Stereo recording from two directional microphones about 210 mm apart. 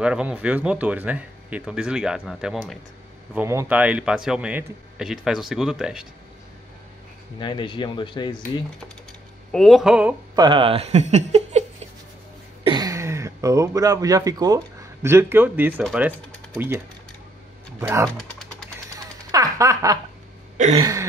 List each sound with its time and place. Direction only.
0.0 s speech: 5° right (ahead or behind)
7.3 s speech: 20° left (ahead or behind)
9.5 s speech: centre (ahead or behind)
10.3 s speech: 20° right (ahead or behind)
12.6 s speech: 20° right (ahead or behind)
19.3 s a sound: 15° right (ahead or behind)
20.7 s speech: 15° right (ahead or behind)